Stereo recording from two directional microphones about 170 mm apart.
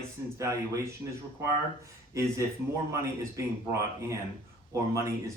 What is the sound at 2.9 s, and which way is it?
Speech, 15° right (ahead or behind).